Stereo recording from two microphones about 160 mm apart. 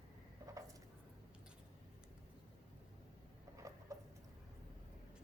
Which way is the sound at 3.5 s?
20° right (ahead or behind).